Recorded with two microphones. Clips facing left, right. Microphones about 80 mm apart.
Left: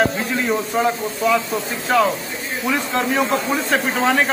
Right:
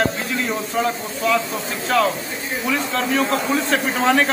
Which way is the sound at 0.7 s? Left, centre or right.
Centre.